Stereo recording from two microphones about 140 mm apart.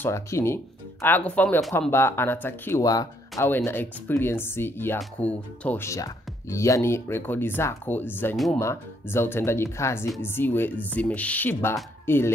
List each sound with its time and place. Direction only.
0.0 s speech: 20° left (ahead or behind)
3.4 s speech: 15° left (ahead or behind)
5.9 s speech: 20° left (ahead or behind)